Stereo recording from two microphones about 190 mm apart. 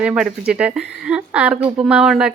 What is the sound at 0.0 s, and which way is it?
A woman's voice, 5° right (ahead or behind).